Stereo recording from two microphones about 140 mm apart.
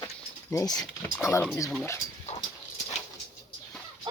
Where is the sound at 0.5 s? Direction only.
25° left (ahead or behind).